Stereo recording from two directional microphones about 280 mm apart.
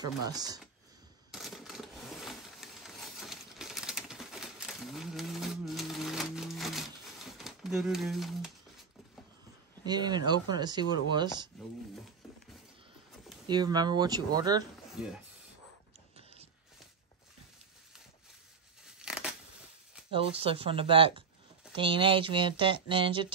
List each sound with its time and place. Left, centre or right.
0.0 s speech: centre
1.3 s coin: centre
9.8 s speech: centre
13.5 s speech: centre
15.0 s speech: centre
18.9 s scissors: centre
20.1 s speech: centre